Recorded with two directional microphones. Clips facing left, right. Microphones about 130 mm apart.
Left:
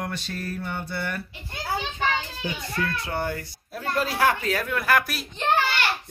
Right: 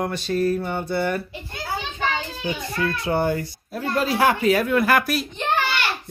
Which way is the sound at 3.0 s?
25° right (ahead or behind).